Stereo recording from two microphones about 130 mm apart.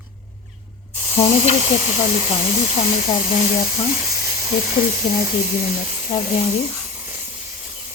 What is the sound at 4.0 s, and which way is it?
Sizzle, 25° right (ahead or behind).